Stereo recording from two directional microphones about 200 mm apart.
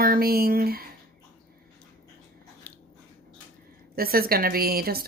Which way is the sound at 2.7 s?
10° left (ahead or behind).